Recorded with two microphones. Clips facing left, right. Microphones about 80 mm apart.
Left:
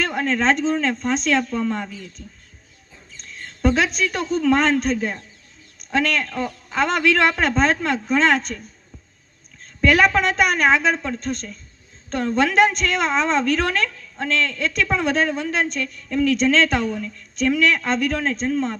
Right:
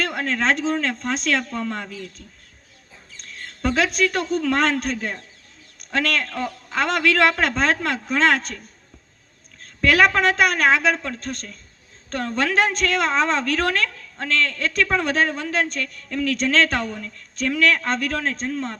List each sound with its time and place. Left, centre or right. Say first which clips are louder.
0.0 s speech: left 2 dB; right
3.2 s speech: left 4 dB; right
9.6 s a sound: left 1 dB; right
10.2 s a woman's voice: even; right